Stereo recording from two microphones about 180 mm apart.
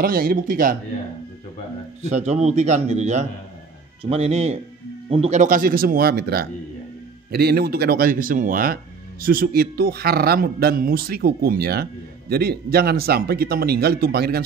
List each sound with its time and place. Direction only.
0.0 s speech: 55° right (ahead or behind)
2.0 s a man's voice: 40° right (ahead or behind); by 14.4 s 60° right (ahead or behind)